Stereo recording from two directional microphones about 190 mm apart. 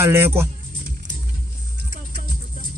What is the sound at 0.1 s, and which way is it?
Speech, 10° right (ahead or behind).